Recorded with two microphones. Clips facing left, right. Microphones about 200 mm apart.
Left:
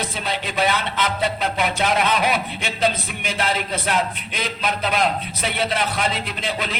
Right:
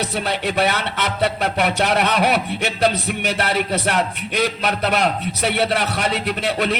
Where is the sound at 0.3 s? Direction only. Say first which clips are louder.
Right 1 dB; 65° right (ahead or behind).